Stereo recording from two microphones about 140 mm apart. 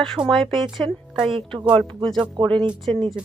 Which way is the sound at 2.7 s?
Centre (ahead or behind).